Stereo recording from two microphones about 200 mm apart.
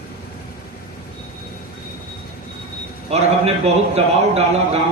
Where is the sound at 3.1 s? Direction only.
30° right (ahead or behind).